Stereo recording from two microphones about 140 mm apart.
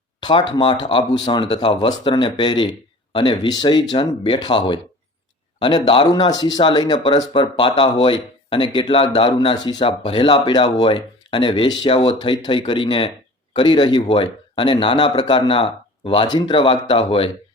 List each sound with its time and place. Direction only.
0.2 s speech: 30° left (ahead or behind)